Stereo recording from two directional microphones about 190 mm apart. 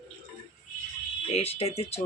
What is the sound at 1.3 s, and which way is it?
Speech, 30° left (ahead or behind).